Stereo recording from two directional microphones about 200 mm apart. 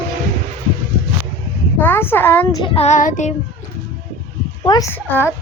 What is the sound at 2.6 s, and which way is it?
Child singing, 30° left (ahead or behind).